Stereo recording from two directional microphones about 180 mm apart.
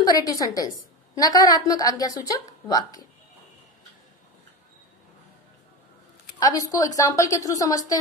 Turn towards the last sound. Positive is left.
turn(degrees=20)  # may be behind; listen again after turning